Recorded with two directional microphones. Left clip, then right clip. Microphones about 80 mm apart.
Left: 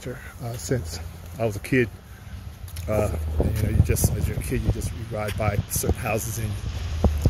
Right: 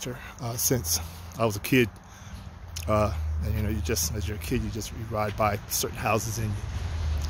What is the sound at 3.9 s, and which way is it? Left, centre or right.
Speech, right.